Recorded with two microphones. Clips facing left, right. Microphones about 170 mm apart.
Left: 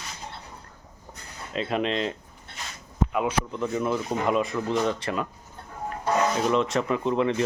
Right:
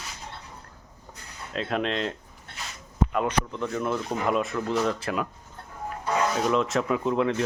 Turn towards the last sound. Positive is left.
turn(degrees=0)  # may be behind; listen again after turning